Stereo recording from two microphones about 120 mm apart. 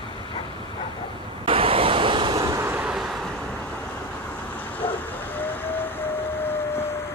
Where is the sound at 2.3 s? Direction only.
25° right (ahead or behind).